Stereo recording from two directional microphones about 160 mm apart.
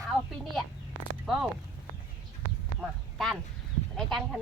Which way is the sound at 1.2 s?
Centre (ahead or behind).